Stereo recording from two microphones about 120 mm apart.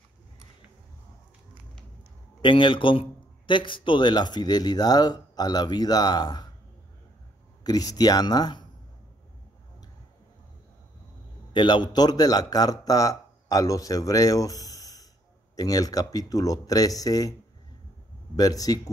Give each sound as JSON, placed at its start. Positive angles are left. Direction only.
{"t": 2.4, "sound": "a man's voice", "side_deg": 45}
{"t": 7.6, "sound": "a man's voice", "side_deg": 30}
{"t": 11.5, "sound": "a man's voice", "side_deg": 40}
{"t": 18.3, "sound": "a man's voice", "side_deg": 30}